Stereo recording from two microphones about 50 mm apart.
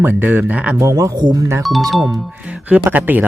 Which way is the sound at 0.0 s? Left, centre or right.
Right.